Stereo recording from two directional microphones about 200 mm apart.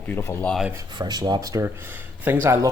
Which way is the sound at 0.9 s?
20° right (ahead or behind).